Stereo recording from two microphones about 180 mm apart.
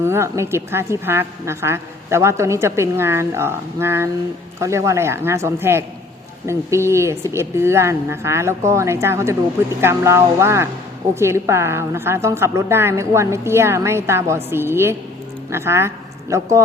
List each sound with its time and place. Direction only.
0.0 s a woman's voice: 15° right (ahead or behind)